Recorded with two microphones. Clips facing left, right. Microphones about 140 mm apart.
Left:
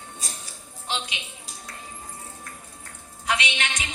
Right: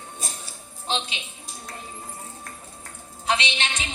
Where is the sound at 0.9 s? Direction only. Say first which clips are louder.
Right 3 dB; 30° right (ahead or behind).